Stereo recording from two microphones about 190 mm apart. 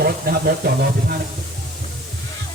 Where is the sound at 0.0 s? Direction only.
55° right (ahead or behind).